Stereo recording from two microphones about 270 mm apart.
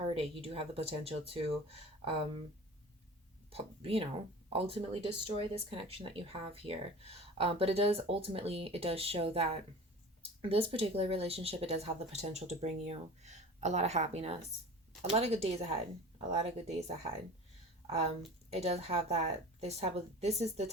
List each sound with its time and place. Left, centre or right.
0.0 s speech: right
3.5 s a woman's voice: right